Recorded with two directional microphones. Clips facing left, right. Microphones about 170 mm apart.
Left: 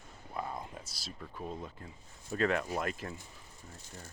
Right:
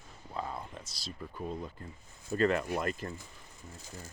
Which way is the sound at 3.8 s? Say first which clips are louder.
Right 3 dB; 90° right.